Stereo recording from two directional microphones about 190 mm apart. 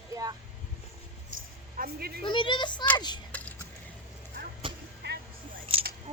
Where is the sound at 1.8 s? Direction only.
55° right (ahead or behind).